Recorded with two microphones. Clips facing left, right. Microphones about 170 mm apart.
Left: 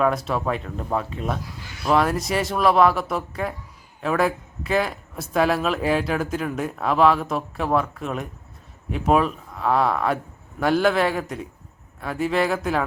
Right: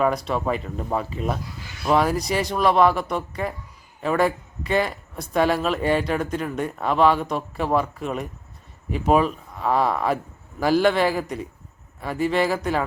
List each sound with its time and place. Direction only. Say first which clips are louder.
0.0 s speech: even; centre (ahead or behind)